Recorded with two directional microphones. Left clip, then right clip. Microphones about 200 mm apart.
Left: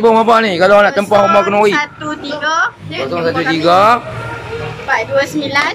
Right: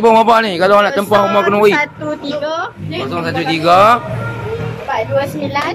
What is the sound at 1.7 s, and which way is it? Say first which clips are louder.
Speech: right 1 dB; 30° right (ahead or behind).